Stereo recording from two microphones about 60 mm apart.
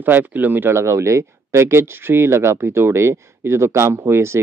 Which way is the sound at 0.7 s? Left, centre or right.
Right.